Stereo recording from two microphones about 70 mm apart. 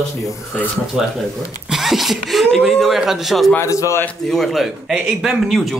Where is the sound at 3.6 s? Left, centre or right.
Left.